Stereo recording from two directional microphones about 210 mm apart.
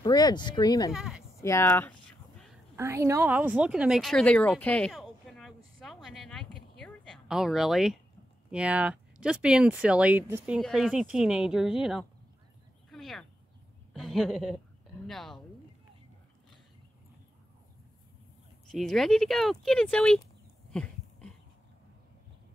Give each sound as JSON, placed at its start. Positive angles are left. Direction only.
{"t": 0.0, "sound": "speech", "side_deg": 20}
{"t": 0.9, "sound": "speech", "side_deg": 0}
{"t": 1.4, "sound": "speech", "side_deg": 10}
{"t": 2.7, "sound": "a sound", "side_deg": -10}
{"t": 8.5, "sound": "speech", "side_deg": -5}
{"t": 12.9, "sound": "a sound", "side_deg": 0}
{"t": 13.9, "sound": "a woman's voice", "side_deg": 0}
{"t": 18.7, "sound": "speech", "side_deg": 0}
{"t": 20.7, "sound": "a sound", "side_deg": 5}